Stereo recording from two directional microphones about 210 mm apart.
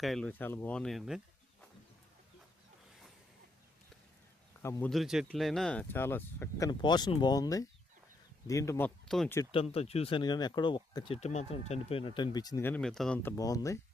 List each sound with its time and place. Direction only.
0.0 s speech: centre (ahead or behind)
4.6 s speech: 15° left (ahead or behind)
4.9 s speech: centre (ahead or behind)
9.0 s speech: centre (ahead or behind)
9.7 s speech: 30° left (ahead or behind); by 13.3 s 5° left (ahead or behind)
13.3 s speech: 15° left (ahead or behind)